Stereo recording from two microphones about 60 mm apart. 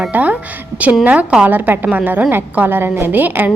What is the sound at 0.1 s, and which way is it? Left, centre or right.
A woman's voice, right.